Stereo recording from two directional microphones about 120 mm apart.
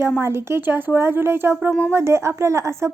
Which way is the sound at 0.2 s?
20° right (ahead or behind).